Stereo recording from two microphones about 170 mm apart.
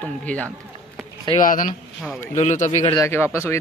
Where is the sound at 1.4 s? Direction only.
50° left (ahead or behind).